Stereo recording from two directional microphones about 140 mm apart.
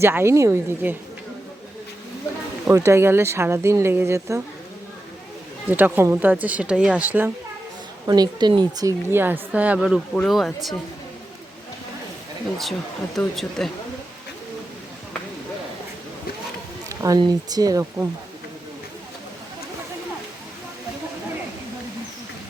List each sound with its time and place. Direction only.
0.0 s a woman's voice: 15° right (ahead or behind)
2.6 s speech: 20° right (ahead or behind)
5.7 s a woman's voice: 10° right (ahead or behind)
8.0 s a woman's voice: 30° right (ahead or behind); by 10.8 s centre (ahead or behind)
13.1 s speech: centre (ahead or behind)
16.9 s a sound: 25° right (ahead or behind)
17.2 s speech: 30° right (ahead or behind)